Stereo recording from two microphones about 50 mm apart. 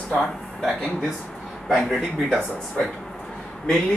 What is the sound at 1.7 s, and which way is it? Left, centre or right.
Speech, centre.